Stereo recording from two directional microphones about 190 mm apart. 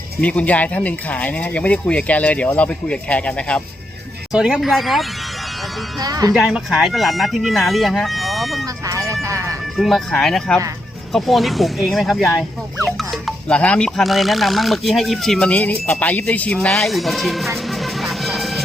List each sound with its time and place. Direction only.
0.2 s speech: 5° left (ahead or behind)
6.0 s speech: 20° right (ahead or behind)
6.3 s speech: 5° right (ahead or behind)
8.6 s vehicle: 15° right (ahead or behind)
9.7 s speech: centre (ahead or behind)